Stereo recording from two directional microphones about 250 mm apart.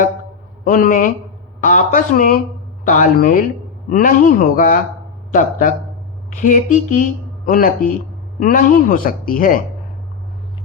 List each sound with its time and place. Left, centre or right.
0.6 s speech: left